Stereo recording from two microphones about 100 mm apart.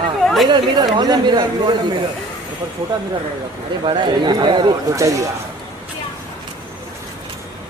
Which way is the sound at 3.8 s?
55° right (ahead or behind).